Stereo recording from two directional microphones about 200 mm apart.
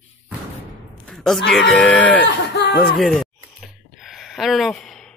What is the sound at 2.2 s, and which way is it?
Speech, 55° left (ahead or behind).